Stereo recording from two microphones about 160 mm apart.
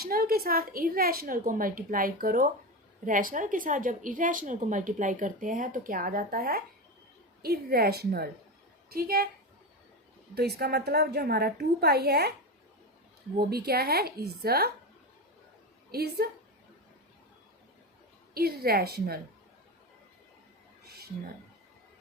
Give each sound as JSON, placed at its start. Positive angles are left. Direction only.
{"t": 0.0, "sound": "a woman's voice", "side_deg": -70}
{"t": 10.6, "sound": "a woman's voice", "side_deg": -85}
{"t": 13.7, "sound": "speech", "side_deg": -75}
{"t": 15.9, "sound": "speech", "side_deg": -75}
{"t": 18.3, "sound": "speech", "side_deg": -75}